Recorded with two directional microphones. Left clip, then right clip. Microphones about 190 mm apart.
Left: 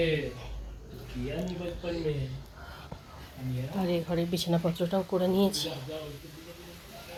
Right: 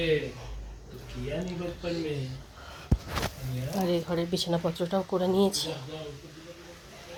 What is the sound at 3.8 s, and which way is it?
Speech, 15° right (ahead or behind).